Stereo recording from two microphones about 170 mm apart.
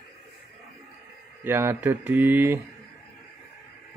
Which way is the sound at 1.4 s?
15° right (ahead or behind).